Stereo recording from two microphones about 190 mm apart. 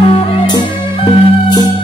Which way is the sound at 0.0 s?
25° left (ahead or behind).